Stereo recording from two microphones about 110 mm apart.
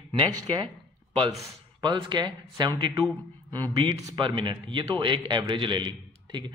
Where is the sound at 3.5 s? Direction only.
35° right (ahead or behind).